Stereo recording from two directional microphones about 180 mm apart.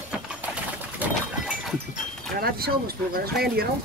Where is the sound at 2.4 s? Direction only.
60° right (ahead or behind).